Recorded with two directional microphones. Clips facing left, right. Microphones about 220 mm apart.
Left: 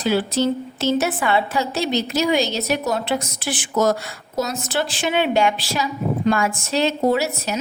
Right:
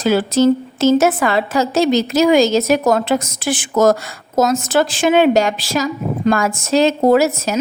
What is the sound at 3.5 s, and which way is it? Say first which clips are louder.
A woman's voice: right 6 dB; 45° right (ahead or behind).